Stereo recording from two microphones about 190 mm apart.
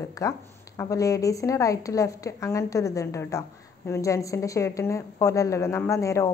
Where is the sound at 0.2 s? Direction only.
15° left (ahead or behind).